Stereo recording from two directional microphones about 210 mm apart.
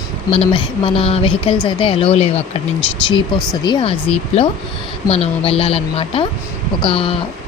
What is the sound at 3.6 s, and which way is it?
A woman's voice, 25° left (ahead or behind).